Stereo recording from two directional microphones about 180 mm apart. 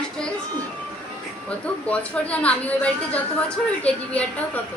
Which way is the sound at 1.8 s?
5° left (ahead or behind).